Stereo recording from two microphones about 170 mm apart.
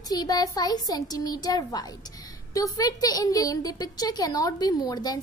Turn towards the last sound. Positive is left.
turn(degrees=25)  # may be behind; listen again after turning